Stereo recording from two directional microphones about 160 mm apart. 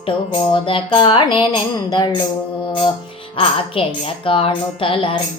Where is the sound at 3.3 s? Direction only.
35° left (ahead or behind).